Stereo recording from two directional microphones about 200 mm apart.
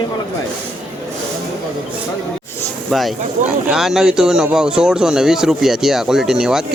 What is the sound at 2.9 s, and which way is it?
Speech, centre (ahead or behind).